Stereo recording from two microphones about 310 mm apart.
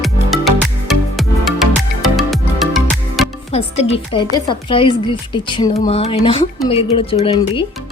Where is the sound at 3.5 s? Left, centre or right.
Centre.